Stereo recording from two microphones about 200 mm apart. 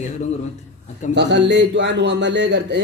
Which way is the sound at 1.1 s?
60° right (ahead or behind).